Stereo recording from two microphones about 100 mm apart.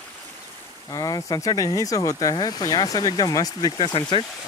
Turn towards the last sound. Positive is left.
turn(degrees=60)  # may be behind; listen again after turning